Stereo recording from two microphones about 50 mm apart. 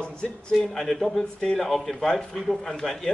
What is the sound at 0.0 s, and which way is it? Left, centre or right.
Speech, centre.